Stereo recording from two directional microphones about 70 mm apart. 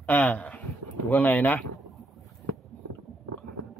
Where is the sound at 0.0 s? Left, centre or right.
Left.